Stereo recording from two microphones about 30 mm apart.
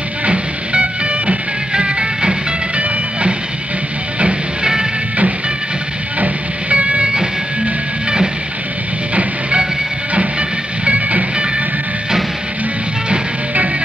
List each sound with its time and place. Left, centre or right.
0.3 s music: right
6.7 s train: right
10.9 s music: right